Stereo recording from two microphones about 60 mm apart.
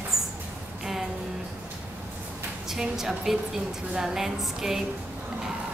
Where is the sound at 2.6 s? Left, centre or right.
Centre.